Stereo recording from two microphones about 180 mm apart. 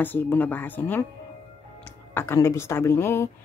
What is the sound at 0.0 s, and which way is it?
Speech, 10° left (ahead or behind).